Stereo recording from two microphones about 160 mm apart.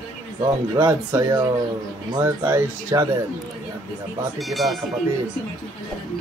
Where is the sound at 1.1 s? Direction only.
15° right (ahead or behind).